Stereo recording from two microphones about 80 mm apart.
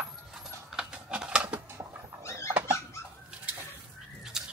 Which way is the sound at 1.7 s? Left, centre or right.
Right.